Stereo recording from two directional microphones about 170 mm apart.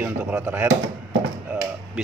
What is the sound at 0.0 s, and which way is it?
Speech, 10° right (ahead or behind).